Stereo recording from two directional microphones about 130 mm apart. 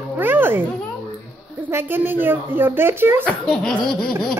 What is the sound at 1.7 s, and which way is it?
Speech, 15° right (ahead or behind).